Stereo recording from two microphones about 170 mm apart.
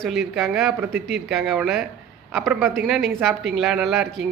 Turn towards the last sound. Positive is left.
turn(degrees=0)  # may be behind; listen again after turning